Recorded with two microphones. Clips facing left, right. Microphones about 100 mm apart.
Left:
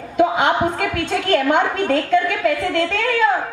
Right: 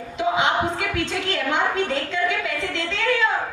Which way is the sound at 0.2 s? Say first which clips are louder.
Left 5 dB; 50° left (ahead or behind).